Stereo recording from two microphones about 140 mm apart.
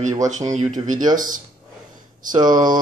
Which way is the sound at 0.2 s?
60° right (ahead or behind).